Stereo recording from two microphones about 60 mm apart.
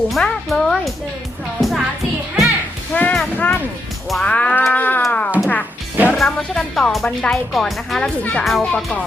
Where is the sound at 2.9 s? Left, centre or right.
Left.